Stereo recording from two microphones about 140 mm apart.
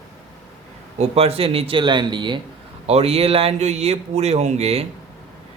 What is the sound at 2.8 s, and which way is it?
A man's voice, 45° right (ahead or behind).